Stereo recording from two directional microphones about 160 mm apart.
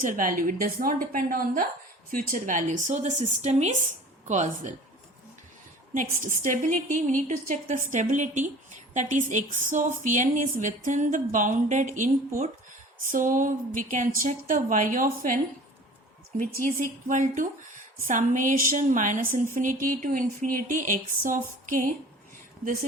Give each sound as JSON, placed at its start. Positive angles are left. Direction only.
{"t": 0.0, "sound": "a woman's voice", "side_deg": -55}
{"t": 5.9, "sound": "a woman's voice", "side_deg": -55}
{"t": 16.4, "sound": "a woman's voice", "side_deg": -65}